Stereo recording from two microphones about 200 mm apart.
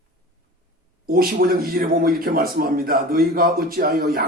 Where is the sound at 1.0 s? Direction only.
45° right (ahead or behind).